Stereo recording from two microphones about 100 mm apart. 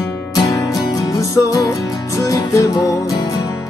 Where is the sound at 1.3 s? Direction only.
35° left (ahead or behind).